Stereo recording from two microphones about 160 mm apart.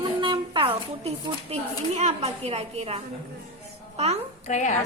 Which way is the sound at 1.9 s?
40° right (ahead or behind).